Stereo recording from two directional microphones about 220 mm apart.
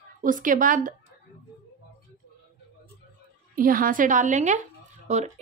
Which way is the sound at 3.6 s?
40° right (ahead or behind).